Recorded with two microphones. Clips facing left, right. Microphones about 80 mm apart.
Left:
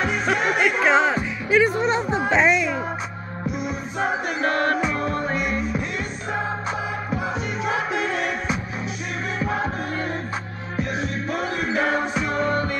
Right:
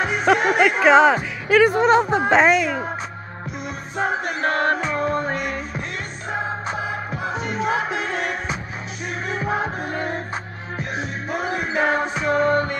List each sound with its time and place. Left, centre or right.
0.0 s music: centre
0.8 s speech: right
1.5 s speech: right
4.0 s music: centre
4.5 s music: right
7.1 s music: centre
12.4 s music: right